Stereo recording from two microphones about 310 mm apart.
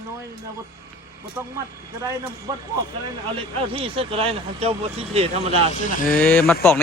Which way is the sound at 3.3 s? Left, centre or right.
Centre.